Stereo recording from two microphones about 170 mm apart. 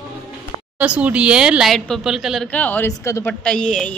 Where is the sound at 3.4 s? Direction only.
5° left (ahead or behind).